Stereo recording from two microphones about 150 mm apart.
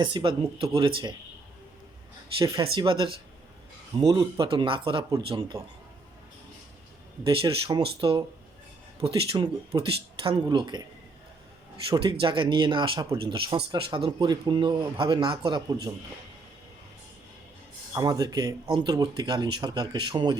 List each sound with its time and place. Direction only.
0.0 s speech: 35° right (ahead or behind)
2.4 s speech: 25° right (ahead or behind)
2.7 s speech: 35° right (ahead or behind)
7.3 s speech: 30° right (ahead or behind)
11.9 s speech: 35° right (ahead or behind)
17.9 s speech: 25° right (ahead or behind)